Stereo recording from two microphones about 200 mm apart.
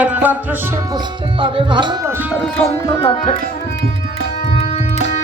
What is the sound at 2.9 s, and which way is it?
Music, 25° left (ahead or behind).